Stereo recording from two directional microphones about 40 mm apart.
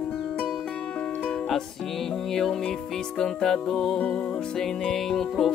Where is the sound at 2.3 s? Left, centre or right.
Centre.